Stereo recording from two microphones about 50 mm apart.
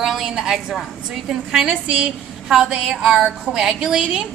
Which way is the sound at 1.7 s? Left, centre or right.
Right.